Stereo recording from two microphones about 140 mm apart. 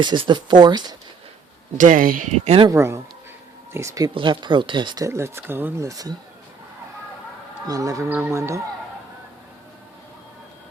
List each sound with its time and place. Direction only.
0.0 s speech: 35° right (ahead or behind)
1.8 s speech: 75° right (ahead or behind)
2.3 s speech: 45° right (ahead or behind)
2.6 s speech: 20° right (ahead or behind)
4.1 s speech: 35° right (ahead or behind)
5.0 s speech: 20° right (ahead or behind)
7.7 s speech: 25° right (ahead or behind)